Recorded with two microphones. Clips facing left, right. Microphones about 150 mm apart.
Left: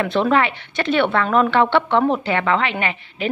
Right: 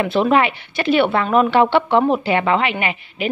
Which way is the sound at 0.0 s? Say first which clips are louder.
Right 2 dB; 15° right (ahead or behind).